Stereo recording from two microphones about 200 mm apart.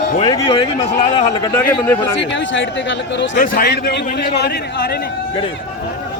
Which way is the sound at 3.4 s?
50° left (ahead or behind).